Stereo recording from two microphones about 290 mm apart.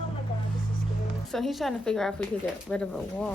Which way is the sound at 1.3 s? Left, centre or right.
Centre.